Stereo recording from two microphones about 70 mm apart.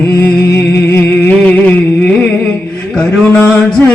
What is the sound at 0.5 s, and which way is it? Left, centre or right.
Music, left.